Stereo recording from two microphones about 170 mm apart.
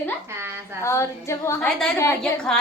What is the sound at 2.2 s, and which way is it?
Speech, 5° left (ahead or behind).